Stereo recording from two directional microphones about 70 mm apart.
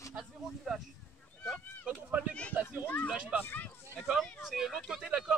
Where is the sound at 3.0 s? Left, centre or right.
Centre.